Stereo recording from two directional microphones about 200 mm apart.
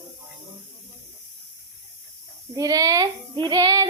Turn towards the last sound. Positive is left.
turn(degrees=-20)  # may be behind; listen again after turning